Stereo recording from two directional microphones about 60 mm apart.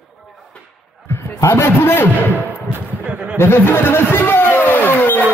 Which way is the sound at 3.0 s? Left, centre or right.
Right.